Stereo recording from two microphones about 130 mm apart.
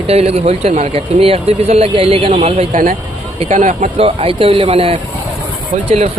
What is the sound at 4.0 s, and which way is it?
Speech, 50° right (ahead or behind).